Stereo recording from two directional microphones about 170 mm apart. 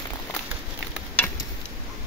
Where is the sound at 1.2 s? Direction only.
10° left (ahead or behind).